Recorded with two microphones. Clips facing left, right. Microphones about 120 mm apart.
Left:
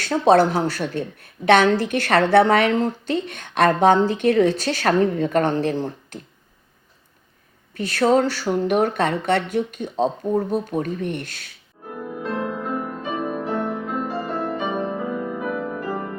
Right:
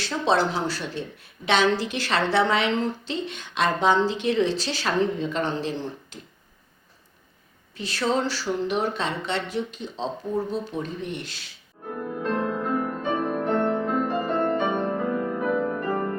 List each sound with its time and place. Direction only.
0.0 s a woman's voice: 50° left (ahead or behind)
7.7 s a woman's voice: 55° left (ahead or behind)
11.9 s music: 5° left (ahead or behind)